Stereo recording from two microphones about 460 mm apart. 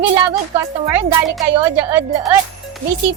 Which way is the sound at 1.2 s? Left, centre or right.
Centre.